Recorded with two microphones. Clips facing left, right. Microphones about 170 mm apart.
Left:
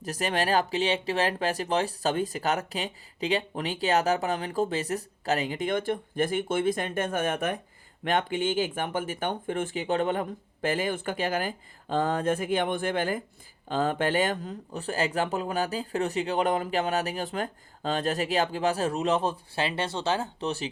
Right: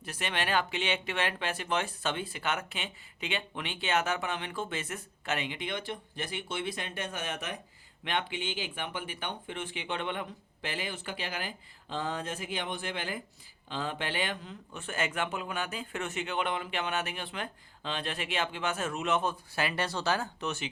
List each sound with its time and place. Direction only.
0.0 s speech: 40° left (ahead or behind)